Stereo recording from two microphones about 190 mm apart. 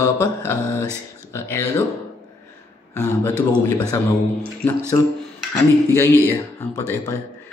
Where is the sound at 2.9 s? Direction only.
10° left (ahead or behind).